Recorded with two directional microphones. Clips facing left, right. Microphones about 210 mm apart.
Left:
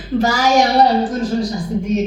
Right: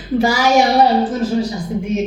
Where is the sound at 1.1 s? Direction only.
10° right (ahead or behind).